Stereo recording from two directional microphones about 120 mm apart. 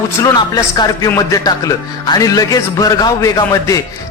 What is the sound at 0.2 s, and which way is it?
A man's voice, 30° left (ahead or behind).